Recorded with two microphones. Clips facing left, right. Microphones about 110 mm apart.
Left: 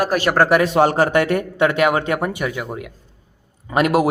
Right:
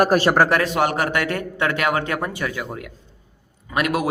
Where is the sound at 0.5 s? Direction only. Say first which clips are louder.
Left 5 dB; 20° left (ahead or behind).